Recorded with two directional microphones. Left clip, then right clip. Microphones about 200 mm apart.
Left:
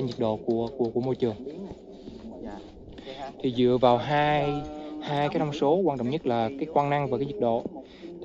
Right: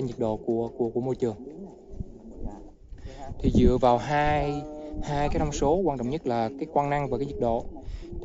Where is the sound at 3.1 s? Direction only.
15° right (ahead or behind).